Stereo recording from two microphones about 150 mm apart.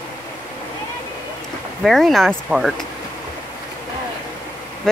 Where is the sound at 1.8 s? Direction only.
Centre (ahead or behind).